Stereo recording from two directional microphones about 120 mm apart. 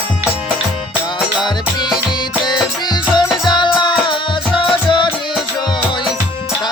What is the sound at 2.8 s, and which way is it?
Music, 40° left (ahead or behind).